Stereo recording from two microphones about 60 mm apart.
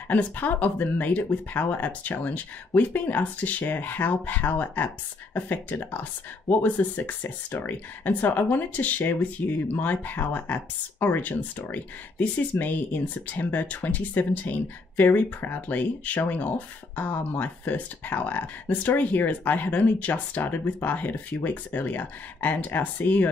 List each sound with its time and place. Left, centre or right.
0.1 s speech: left